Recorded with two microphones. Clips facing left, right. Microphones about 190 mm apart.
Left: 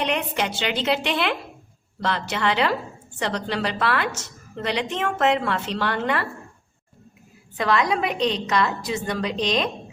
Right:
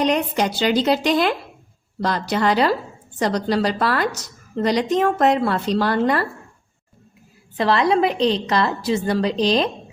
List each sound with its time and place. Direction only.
0.0 s a woman's voice: 40° right (ahead or behind)
7.5 s a woman's voice: 30° right (ahead or behind)